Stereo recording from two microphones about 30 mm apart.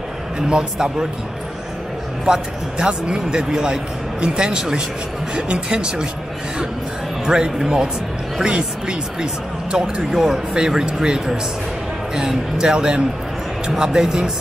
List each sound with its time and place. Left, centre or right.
0.5 s speech: right
2.2 s speech: right
7.2 s speech: right
12.6 s speech: right